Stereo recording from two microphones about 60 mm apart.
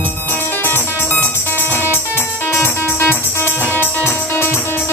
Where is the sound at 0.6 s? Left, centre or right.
Left.